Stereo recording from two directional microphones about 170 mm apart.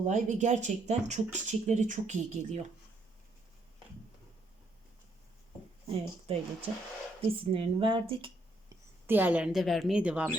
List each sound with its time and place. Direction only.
0.0 s speech: 45° right (ahead or behind)
6.3 s speech: 35° right (ahead or behind)
9.0 s a woman's voice: 10° right (ahead or behind)